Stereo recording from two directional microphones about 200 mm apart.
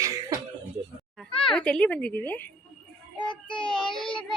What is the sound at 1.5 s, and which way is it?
Speech, 5° left (ahead or behind).